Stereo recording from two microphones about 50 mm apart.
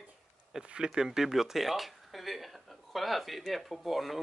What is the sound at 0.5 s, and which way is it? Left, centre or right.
Speech, centre.